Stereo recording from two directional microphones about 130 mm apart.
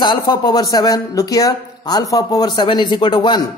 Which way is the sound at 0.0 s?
35° left (ahead or behind).